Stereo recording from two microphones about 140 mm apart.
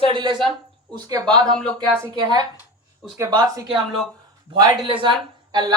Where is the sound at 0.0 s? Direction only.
35° right (ahead or behind).